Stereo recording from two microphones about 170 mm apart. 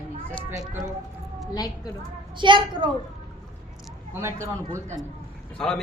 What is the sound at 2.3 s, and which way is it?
Speech, 30° right (ahead or behind).